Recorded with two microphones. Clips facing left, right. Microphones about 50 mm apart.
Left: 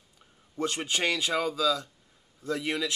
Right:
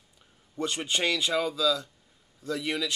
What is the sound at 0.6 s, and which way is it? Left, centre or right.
A man's voice, centre.